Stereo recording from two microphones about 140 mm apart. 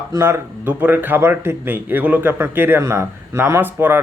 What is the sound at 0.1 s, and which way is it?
Speech, 20° right (ahead or behind).